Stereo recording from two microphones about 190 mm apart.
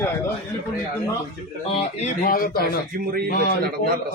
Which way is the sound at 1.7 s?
40° left (ahead or behind).